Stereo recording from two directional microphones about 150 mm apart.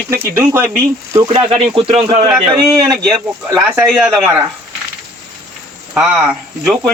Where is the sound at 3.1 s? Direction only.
20° right (ahead or behind).